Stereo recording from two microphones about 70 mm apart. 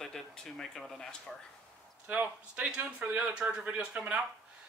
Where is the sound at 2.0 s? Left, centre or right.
Right.